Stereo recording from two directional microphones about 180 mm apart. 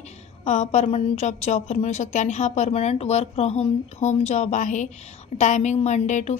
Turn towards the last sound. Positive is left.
turn(degrees=40)  # may be behind; listen again after turning